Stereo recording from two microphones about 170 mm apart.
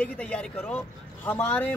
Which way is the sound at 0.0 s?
5° left (ahead or behind).